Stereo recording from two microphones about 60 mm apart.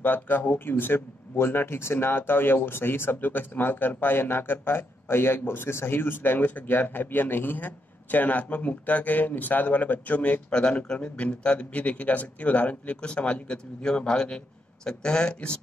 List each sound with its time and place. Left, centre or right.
0.0 s speech: left
10.5 s speech: centre